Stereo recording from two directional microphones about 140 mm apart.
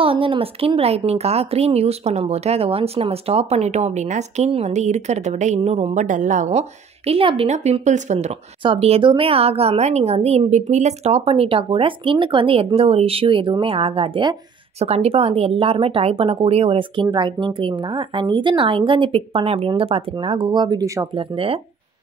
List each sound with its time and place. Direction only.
0.0 s speech: 40° right (ahead or behind); by 6.6 s 60° right (ahead or behind)
7.1 s speech: 40° right (ahead or behind); by 21.1 s 25° right (ahead or behind)
21.1 s speech: 40° right (ahead or behind)